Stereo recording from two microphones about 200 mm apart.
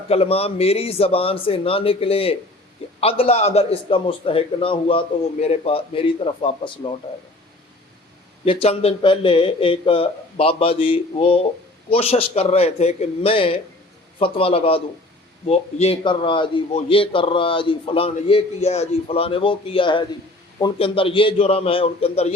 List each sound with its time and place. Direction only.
0.1 s a man's voice: 30° left (ahead or behind)
8.4 s a man's voice: 30° left (ahead or behind)